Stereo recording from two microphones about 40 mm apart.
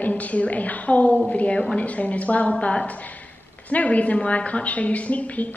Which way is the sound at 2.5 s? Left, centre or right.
Left.